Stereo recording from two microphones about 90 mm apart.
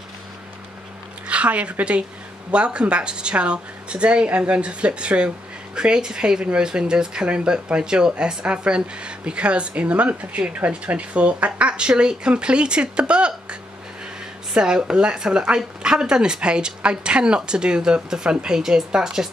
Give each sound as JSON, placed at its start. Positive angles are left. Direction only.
{"t": 1.2, "sound": "a woman's voice", "side_deg": -15}